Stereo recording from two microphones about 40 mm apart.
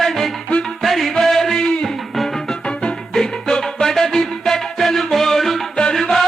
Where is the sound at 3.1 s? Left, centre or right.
Centre.